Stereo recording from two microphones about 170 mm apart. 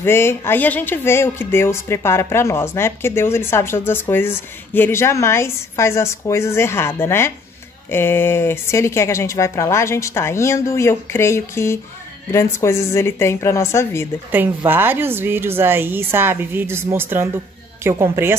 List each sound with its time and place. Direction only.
0.0 s speech: 15° left (ahead or behind)
14.3 s a woman's voice: 10° right (ahead or behind)